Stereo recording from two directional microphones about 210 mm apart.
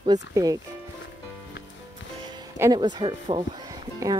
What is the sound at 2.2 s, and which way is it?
Speech, 20° right (ahead or behind).